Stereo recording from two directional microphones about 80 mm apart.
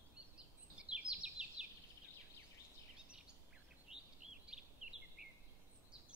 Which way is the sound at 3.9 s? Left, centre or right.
Centre.